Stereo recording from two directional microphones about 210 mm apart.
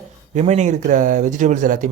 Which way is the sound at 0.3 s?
35° right (ahead or behind).